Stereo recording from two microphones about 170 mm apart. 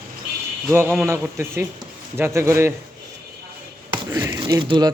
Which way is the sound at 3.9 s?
15° right (ahead or behind).